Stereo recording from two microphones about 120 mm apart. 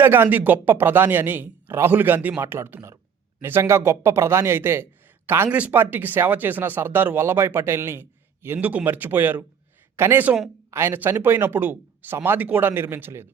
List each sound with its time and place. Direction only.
0.0 s speech: 15° right (ahead or behind)